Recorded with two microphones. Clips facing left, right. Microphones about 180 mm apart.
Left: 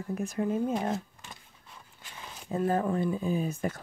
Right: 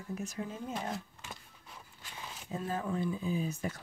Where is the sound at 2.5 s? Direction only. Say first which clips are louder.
Left 8 dB; 55° left (ahead or behind).